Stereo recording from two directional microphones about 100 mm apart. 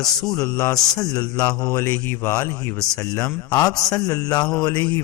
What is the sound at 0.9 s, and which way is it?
A man's voice, 35° left (ahead or behind).